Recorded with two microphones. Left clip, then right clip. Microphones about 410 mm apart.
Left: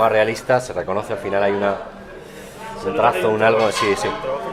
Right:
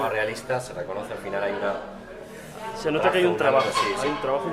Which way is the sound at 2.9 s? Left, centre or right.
Right.